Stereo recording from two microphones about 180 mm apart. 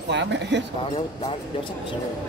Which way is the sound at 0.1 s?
75° right (ahead or behind).